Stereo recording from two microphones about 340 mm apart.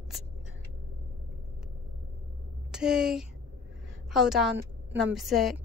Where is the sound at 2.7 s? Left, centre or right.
Centre.